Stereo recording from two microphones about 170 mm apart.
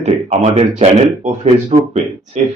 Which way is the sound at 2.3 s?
45° right (ahead or behind).